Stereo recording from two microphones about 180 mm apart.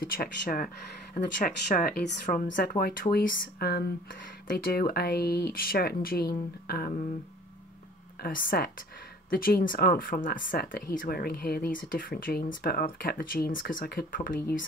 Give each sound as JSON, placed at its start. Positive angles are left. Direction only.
{"t": 0.0, "sound": "speech", "side_deg": 55}
{"t": 8.2, "sound": "speech", "side_deg": 50}